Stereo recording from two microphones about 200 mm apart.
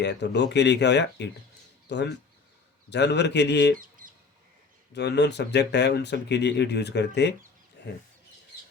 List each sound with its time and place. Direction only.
0.0 s speech: 60° left (ahead or behind)
3.8 s bird: 45° right (ahead or behind)
4.9 s speech: 55° left (ahead or behind)
7.8 s a sound: 60° left (ahead or behind)